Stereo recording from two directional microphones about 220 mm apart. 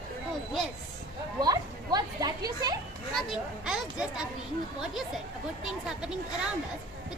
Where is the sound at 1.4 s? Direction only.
20° right (ahead or behind).